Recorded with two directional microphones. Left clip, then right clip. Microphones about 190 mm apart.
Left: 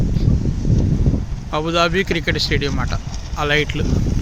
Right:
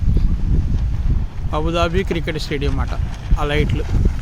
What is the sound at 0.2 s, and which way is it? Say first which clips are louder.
Wind: left 5 dB; centre (ahead or behind).